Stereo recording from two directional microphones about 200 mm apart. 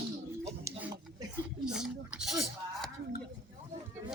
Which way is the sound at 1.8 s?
5° right (ahead or behind).